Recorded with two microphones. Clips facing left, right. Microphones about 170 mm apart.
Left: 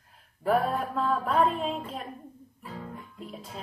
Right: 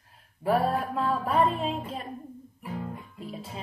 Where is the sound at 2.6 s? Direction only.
15° right (ahead or behind).